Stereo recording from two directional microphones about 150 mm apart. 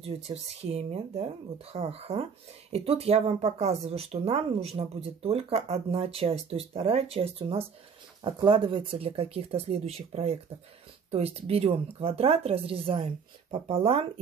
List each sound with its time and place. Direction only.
0.0 s speech: 45° right (ahead or behind)